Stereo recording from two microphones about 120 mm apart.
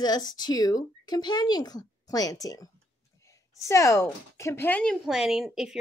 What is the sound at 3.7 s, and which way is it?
Speech, 25° left (ahead or behind).